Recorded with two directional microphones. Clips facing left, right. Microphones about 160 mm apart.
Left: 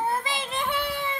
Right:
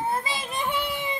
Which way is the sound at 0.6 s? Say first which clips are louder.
Right 1 dB; 15° right (ahead or behind).